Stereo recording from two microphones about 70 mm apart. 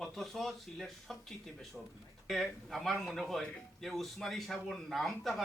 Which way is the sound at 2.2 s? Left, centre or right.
Centre.